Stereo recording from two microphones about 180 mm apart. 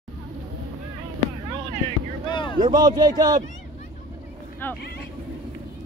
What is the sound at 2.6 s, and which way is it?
Speech, 20° right (ahead or behind).